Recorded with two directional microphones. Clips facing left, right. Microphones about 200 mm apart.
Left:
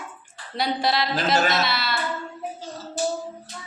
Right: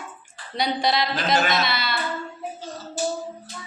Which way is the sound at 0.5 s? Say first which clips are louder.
Right 1 dB; 5° left (ahead or behind).